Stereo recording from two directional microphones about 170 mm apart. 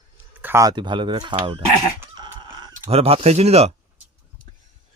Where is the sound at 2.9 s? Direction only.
35° right (ahead or behind).